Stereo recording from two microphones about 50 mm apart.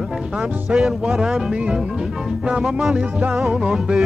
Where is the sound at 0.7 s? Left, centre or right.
Centre.